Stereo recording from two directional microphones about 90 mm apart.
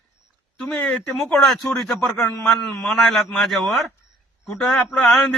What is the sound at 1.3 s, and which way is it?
A man's voice, 5° left (ahead or behind).